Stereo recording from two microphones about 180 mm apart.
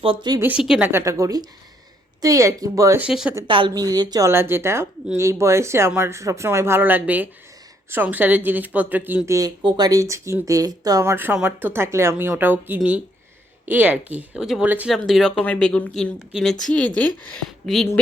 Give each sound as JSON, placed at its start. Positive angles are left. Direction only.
{"t": 0.0, "sound": "speech", "side_deg": -30}
{"t": 0.4, "sound": "speech", "side_deg": -5}
{"t": 3.0, "sound": "speech", "side_deg": -5}
{"t": 3.4, "sound": "speech", "side_deg": -25}